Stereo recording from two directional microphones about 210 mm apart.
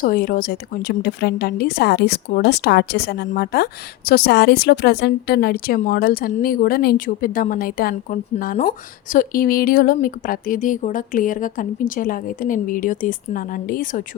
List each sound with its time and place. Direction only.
0.0 s a woman's voice: 45° left (ahead or behind)